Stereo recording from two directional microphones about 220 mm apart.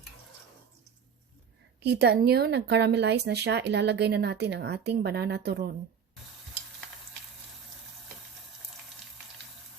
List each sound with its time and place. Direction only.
1.8 s speech: 50° right (ahead or behind)